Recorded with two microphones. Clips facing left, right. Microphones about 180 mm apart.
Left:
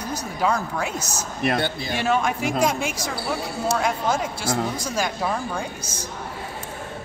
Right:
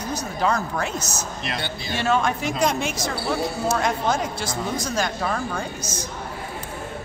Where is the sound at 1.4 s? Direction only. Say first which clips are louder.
Left 10 dB; 50° left (ahead or behind).